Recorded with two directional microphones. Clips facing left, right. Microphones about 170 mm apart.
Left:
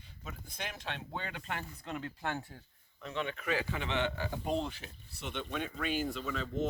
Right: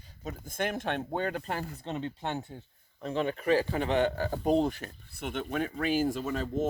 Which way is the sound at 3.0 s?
40° right (ahead or behind).